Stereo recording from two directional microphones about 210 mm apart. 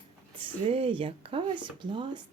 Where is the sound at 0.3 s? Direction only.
25° right (ahead or behind).